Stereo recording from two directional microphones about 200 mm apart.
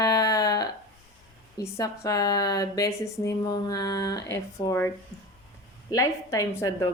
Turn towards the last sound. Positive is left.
turn(degrees=15)  # may be behind; listen again after turning